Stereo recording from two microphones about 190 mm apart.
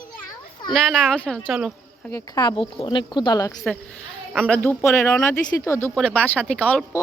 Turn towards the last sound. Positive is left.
turn(degrees=10)  # may be behind; listen again after turning